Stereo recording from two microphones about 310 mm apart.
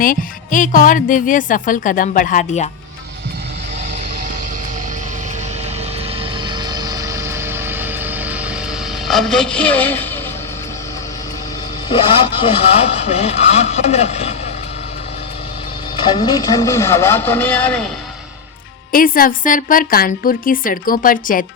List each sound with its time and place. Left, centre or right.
0.0 s a woman's voice: left
6.5 s music: centre
9.0 s speech: centre
11.9 s a woman's voice: centre
16.0 s speech: centre
18.9 s a woman's voice: left